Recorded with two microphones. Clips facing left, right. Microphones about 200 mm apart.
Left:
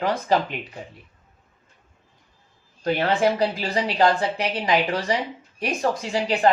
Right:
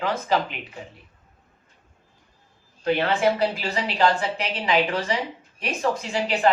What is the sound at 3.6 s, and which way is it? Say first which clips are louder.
A woman's voice: left 2 dB; 35° left (ahead or behind).